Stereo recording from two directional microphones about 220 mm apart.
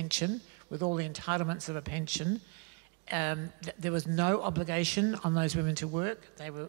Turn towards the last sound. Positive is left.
turn(degrees=-15)  # may be behind; listen again after turning